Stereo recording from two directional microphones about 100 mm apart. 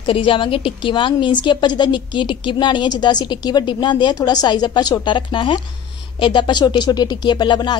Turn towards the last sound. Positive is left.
turn(degrees=45)  # may be behind; listen again after turning